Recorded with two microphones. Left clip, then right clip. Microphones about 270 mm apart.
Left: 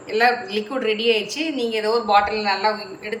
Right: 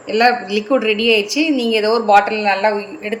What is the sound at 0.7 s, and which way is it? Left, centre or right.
A woman's voice, centre.